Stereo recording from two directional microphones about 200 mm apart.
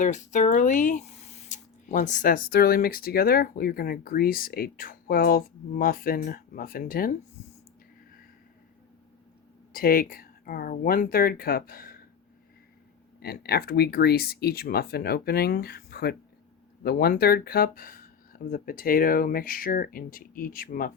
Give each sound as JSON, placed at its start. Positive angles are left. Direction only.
{"t": 0.0, "sound": "speech", "side_deg": 40}
{"t": 9.7, "sound": "speech", "side_deg": 45}
{"t": 13.1, "sound": "speech", "side_deg": 50}